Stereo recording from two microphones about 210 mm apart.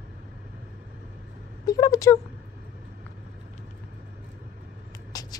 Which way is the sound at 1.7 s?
15° left (ahead or behind).